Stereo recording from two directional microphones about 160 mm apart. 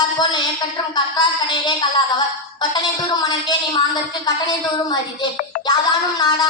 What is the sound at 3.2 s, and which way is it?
Speech, 25° left (ahead or behind).